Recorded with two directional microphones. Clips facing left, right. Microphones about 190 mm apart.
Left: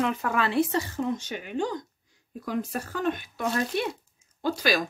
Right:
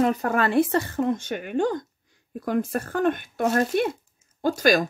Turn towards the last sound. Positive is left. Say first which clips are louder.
# right 5 dB
turn(degrees=-45)  # may be behind; listen again after turning